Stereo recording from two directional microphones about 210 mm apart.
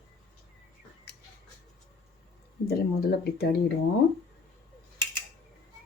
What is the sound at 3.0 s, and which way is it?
Speech, 50° left (ahead or behind).